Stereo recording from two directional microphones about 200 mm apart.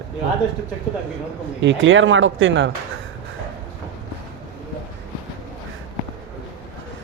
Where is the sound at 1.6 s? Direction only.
70° right (ahead or behind).